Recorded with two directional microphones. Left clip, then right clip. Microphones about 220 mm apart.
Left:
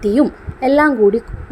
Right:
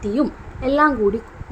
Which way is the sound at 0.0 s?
25° left (ahead or behind).